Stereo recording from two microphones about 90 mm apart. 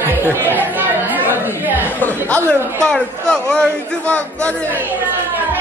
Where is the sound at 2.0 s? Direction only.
20° left (ahead or behind).